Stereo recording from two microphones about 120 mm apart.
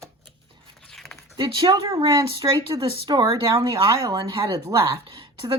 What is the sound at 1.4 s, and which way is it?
Speech, 35° right (ahead or behind).